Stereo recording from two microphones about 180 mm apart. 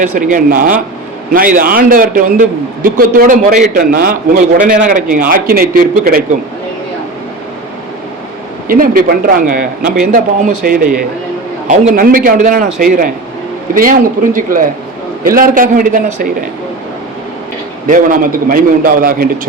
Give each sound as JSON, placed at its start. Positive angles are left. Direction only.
{"t": 0.0, "sound": "a man's voice", "side_deg": -45}
{"t": 8.6, "sound": "a man's voice", "side_deg": -55}
{"t": 13.7, "sound": "a man's voice", "side_deg": -50}
{"t": 17.8, "sound": "a man's voice", "side_deg": -50}